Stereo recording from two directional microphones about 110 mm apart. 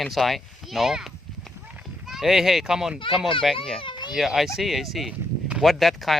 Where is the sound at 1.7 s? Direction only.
10° right (ahead or behind).